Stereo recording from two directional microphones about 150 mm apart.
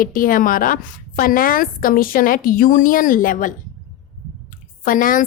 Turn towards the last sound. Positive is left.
turn(degrees=65)  # may be behind; listen again after turning